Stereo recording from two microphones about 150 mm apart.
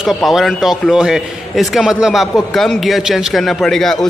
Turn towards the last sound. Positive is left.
turn(degrees=5)  # may be behind; listen again after turning